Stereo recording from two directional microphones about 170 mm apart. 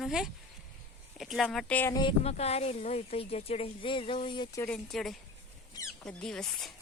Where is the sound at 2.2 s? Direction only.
40° left (ahead or behind).